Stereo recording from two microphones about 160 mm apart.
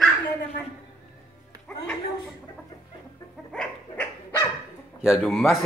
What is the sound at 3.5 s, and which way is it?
Dog, 10° left (ahead or behind).